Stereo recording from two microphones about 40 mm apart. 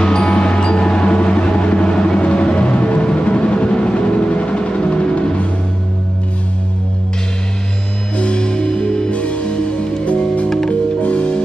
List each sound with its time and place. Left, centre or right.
0.0 s music: left
8.2 s music: left
9.1 s music: left